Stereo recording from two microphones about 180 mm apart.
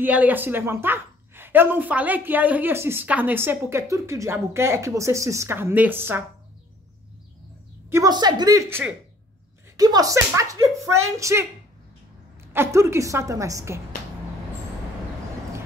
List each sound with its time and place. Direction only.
0.0 s a woman's voice: 10° right (ahead or behind)
7.9 s a woman's voice: 20° right (ahead or behind)
12.5 s a woman's voice: 15° right (ahead or behind)